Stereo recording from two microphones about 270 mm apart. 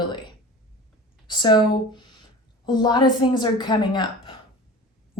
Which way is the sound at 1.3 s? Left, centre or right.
Centre.